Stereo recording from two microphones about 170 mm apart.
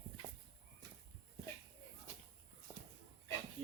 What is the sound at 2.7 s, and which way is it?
Walk, 15° right (ahead or behind).